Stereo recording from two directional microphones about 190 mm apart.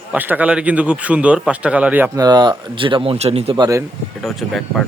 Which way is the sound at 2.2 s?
20° right (ahead or behind).